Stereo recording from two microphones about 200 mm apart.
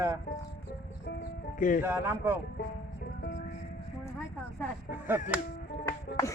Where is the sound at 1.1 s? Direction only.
55° left (ahead or behind).